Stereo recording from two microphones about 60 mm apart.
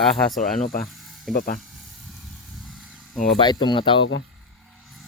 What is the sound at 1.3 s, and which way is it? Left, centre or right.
Speech, centre.